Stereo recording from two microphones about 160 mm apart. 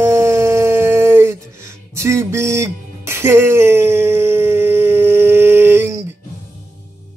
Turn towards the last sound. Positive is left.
turn(degrees=-15)  # may be behind; listen again after turning